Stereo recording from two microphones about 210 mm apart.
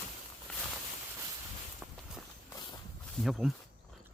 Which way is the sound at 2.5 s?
20° left (ahead or behind).